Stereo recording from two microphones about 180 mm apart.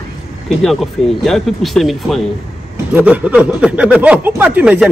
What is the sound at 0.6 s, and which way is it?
Speech, centre (ahead or behind).